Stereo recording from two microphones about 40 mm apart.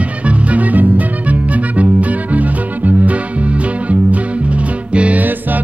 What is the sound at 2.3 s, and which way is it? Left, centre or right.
Music, right.